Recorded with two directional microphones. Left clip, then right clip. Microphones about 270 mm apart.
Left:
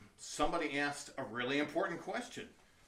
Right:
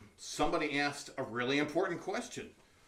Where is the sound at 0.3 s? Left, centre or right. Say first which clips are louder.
Right 3 dB; centre.